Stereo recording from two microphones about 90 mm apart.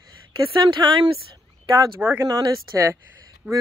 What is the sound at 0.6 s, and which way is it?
Speech, 55° right (ahead or behind).